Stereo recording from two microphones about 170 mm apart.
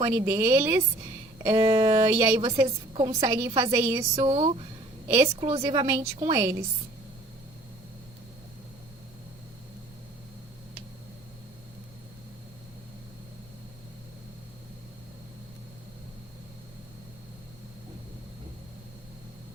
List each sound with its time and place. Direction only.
0.0 s a woman's voice: 20° right (ahead or behind)
4.1 s speech: 35° right (ahead or behind)
5.0 s a woman's voice: 20° right (ahead or behind)
5.4 s speech: 35° right (ahead or behind)
5.6 s a woman's voice: 20° right (ahead or behind)